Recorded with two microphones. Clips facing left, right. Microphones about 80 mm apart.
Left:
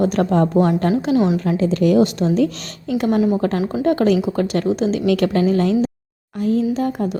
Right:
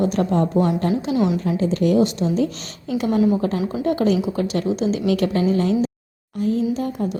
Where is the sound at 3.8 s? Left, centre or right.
Left.